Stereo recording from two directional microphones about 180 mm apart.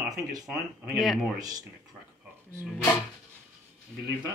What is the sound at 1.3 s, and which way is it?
Speech, 20° right (ahead or behind).